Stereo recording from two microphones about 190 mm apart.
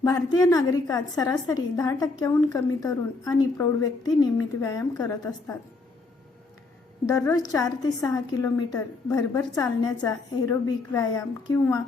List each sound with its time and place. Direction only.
0.0 s a woman's voice: 20° left (ahead or behind)
7.1 s a woman's voice: 20° left (ahead or behind)